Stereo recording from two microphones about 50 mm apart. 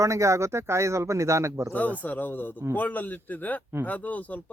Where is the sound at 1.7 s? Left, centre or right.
Left.